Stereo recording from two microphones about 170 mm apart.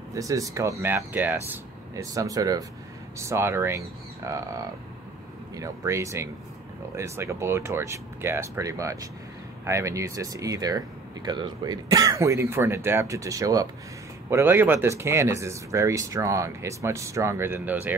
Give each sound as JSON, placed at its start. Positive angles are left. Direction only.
{"t": 0.1, "sound": "speech", "side_deg": -20}